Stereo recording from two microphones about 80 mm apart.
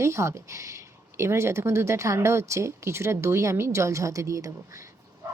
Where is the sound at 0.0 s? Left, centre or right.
Right.